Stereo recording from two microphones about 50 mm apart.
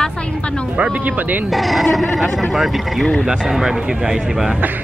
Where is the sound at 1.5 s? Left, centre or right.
Centre.